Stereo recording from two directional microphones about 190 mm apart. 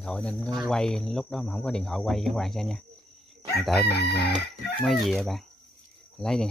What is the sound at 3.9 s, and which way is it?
Chicken, 60° left (ahead or behind).